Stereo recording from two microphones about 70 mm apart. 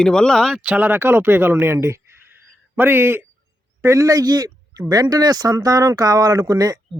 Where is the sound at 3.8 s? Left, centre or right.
Right.